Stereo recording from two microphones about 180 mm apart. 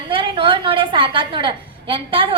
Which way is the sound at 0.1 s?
30° right (ahead or behind).